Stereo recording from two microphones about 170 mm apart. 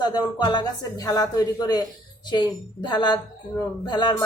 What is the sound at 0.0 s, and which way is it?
Speech, 25° left (ahead or behind).